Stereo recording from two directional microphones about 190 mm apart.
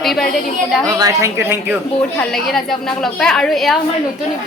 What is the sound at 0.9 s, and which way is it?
Speech, 15° right (ahead or behind).